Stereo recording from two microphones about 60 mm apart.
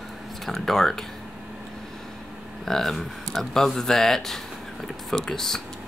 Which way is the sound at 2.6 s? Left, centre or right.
Centre.